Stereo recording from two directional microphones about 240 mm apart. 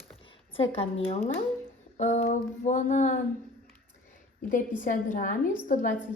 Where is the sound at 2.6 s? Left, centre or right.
Left.